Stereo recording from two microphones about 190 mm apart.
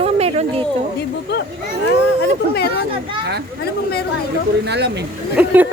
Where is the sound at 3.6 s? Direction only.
55° left (ahead or behind).